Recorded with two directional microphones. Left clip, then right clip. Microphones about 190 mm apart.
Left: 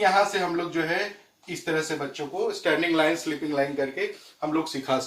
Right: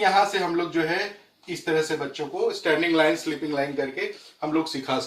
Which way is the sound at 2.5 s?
15° left (ahead or behind).